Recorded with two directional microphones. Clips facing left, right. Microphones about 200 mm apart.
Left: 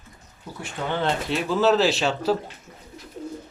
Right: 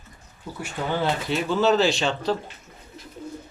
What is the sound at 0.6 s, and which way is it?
Speech, 5° right (ahead or behind).